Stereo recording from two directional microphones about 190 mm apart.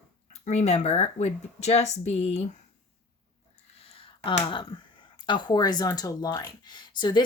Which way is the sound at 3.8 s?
30° left (ahead or behind).